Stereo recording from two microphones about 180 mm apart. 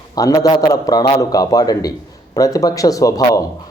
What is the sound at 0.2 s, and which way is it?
A man's voice, 20° left (ahead or behind).